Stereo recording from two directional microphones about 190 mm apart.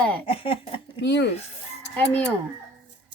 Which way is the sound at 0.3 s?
30° left (ahead or behind).